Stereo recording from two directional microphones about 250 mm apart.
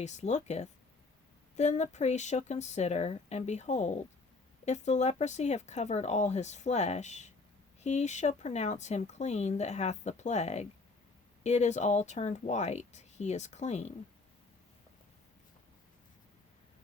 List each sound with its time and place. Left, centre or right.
0.0 s speech: left